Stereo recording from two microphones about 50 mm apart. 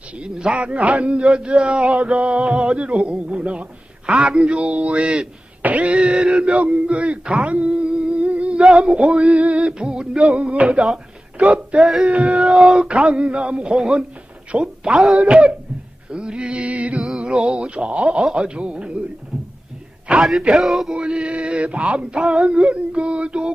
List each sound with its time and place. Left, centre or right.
0.2 s speech: centre
5.6 s speech: right
8.0 s music: right
10.2 s speech: right
20.1 s speech: right
20.5 s male singing: centre
20.9 s speech: centre